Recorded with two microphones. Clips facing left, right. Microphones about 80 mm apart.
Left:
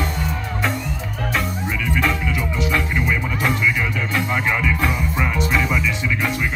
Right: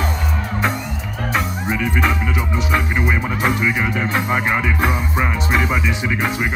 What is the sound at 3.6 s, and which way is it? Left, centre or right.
Music, right.